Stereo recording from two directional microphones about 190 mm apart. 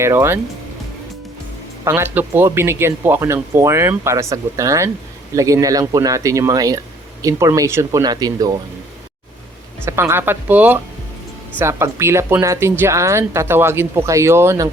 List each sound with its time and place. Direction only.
0.0 s a woman's voice: 15° right (ahead or behind)
1.8 s a woman's voice: 15° right (ahead or behind)
9.8 s a woman's voice: 15° right (ahead or behind)